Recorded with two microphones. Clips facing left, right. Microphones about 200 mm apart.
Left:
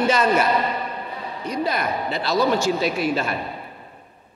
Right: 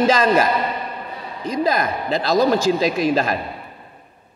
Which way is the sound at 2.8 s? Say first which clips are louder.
Right 4 dB; 90° right.